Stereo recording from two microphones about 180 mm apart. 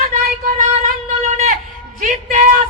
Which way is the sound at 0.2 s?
50° right (ahead or behind).